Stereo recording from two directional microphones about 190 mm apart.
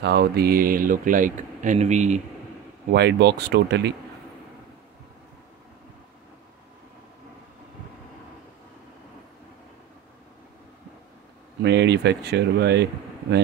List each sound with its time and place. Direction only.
0.0 s speech: 55° right (ahead or behind); by 2.2 s 40° right (ahead or behind)
2.9 s speech: 60° right (ahead or behind)
11.6 s speech: 65° right (ahead or behind)